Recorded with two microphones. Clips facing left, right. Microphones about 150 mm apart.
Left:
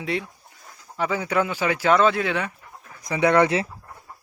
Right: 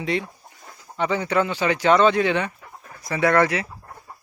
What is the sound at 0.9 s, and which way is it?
Speech, 5° left (ahead or behind).